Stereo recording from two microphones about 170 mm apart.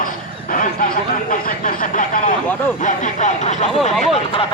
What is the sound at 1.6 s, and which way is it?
Speech, 50° left (ahead or behind).